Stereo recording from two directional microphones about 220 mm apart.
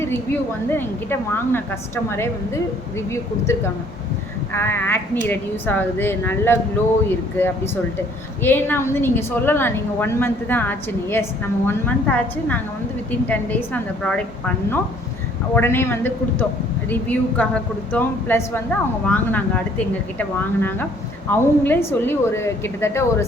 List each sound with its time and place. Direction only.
0.7 s a woman's voice: 10° left (ahead or behind)